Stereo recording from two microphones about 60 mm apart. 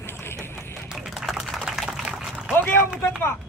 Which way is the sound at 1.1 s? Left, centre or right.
Centre.